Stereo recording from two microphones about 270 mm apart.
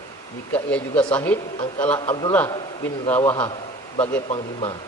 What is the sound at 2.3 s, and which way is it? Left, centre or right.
A man's voice, centre.